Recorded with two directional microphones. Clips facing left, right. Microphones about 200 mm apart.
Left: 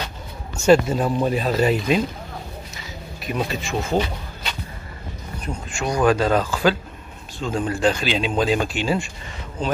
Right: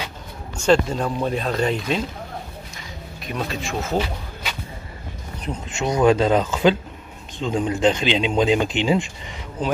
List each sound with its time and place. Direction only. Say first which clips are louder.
0.6 s speech: left 3 dB; 5° left (ahead or behind)
3.3 s speech: left 2 dB; centre (ahead or behind)
5.4 s speech: right 2 dB; 20° right (ahead or behind)